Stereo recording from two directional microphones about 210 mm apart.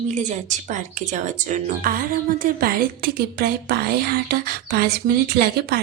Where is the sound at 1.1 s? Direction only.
35° right (ahead or behind).